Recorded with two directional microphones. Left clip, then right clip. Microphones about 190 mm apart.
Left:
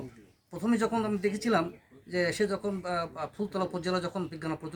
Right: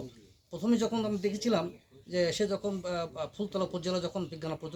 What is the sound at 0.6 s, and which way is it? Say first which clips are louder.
A man's voice: left 1 dB; centre (ahead or behind).